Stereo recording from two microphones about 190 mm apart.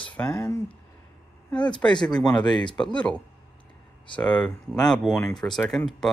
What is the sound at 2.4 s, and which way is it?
Speech, 25° left (ahead or behind).